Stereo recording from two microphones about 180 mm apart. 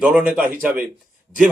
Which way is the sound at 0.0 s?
5° right (ahead or behind).